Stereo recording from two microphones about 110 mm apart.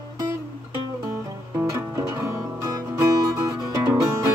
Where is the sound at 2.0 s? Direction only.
25° right (ahead or behind).